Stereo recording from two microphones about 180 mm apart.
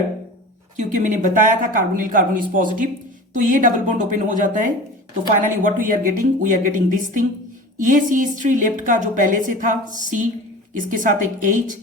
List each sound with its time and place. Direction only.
0.8 s a woman's voice: 45° right (ahead or behind)